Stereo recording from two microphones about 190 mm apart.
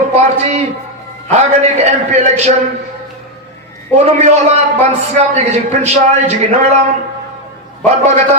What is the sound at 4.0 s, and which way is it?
Speech, 35° right (ahead or behind).